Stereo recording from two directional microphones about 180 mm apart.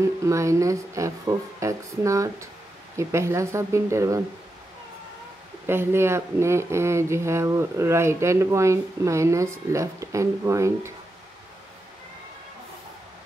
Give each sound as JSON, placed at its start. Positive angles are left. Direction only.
{"t": 0.2, "sound": "speech", "side_deg": -15}
{"t": 5.7, "sound": "speech", "side_deg": -15}